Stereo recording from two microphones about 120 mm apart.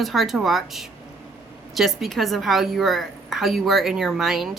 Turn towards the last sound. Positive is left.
turn(degrees=0)  # may be behind; listen again after turning